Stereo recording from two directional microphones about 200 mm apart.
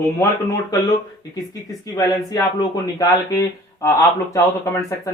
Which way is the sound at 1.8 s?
15° left (ahead or behind).